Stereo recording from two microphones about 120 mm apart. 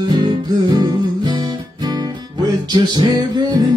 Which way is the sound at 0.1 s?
35° right (ahead or behind).